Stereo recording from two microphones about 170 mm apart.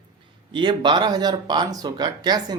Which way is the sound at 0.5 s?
30° right (ahead or behind).